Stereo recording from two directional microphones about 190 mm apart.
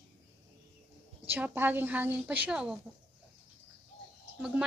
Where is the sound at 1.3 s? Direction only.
10° right (ahead or behind).